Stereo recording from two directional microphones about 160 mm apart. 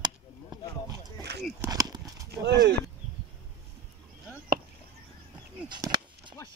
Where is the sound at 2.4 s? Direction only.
90° right.